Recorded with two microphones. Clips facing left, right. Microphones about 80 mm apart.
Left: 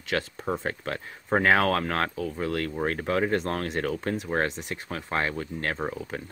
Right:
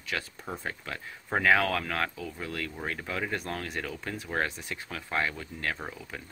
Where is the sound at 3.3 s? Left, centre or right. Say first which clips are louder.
Left 7 dB; left.